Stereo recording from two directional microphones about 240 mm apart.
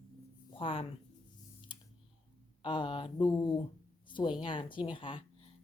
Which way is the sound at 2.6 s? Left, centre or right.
Centre.